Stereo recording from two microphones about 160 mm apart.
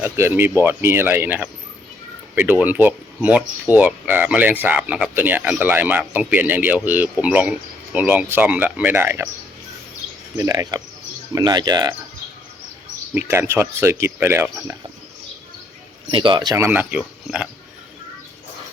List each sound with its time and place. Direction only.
0.0 s speech: 15° right (ahead or behind)
10.3 s speech: 20° right (ahead or behind)
13.1 s speech: 15° right (ahead or behind)
16.1 s speech: 30° right (ahead or behind)
16.6 s speech: 15° right (ahead or behind)